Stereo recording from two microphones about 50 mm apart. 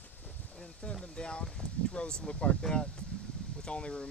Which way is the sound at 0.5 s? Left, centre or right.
Centre.